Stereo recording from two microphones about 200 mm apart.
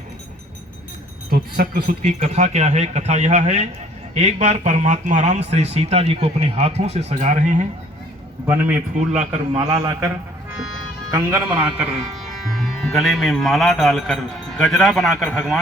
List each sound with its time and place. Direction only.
1.3 s speech: 45° right (ahead or behind)
8.4 s a man's voice: 10° right (ahead or behind)
9.0 s speech: 35° right (ahead or behind)
9.6 s a man's voice: 20° right (ahead or behind)
11.1 s a man's voice: 15° right (ahead or behind)